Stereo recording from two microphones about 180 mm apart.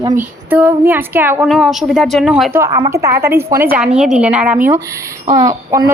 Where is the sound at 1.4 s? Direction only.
Centre (ahead or behind).